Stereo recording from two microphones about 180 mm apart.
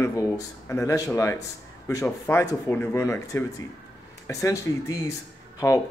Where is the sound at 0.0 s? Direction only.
15° left (ahead or behind).